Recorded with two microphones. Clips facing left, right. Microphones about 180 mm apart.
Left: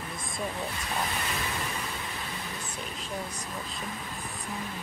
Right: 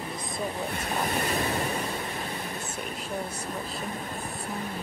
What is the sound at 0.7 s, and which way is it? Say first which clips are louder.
Vehicle: right 4 dB; 40° right (ahead or behind).